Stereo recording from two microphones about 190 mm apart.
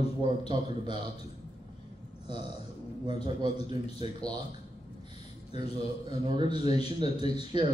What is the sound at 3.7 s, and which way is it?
Speech, 25° right (ahead or behind).